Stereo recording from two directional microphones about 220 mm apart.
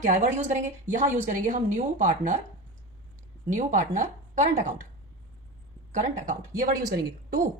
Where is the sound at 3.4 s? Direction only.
35° right (ahead or behind).